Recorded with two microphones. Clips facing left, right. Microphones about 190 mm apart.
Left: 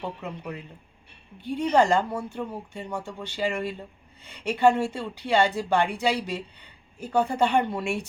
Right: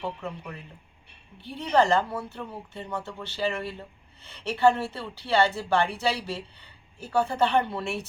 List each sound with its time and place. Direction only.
0.2 s speech: 20° left (ahead or behind)